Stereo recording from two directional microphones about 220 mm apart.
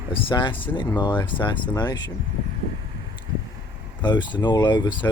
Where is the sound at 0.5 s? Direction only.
10° left (ahead or behind).